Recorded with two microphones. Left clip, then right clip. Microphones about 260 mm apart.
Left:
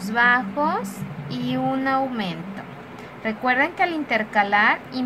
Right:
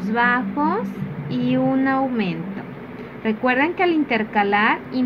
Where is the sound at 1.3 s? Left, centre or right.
Left.